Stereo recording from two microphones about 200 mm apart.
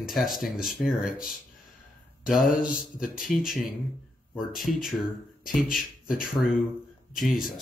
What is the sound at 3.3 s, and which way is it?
Speech, centre (ahead or behind).